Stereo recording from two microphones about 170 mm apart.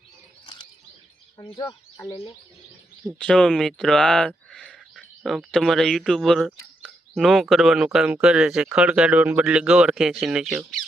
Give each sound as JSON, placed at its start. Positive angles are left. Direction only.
{"t": 0.4, "sound": "chirp", "side_deg": 25}
{"t": 1.4, "sound": "speech", "side_deg": 25}
{"t": 3.2, "sound": "speech", "side_deg": 5}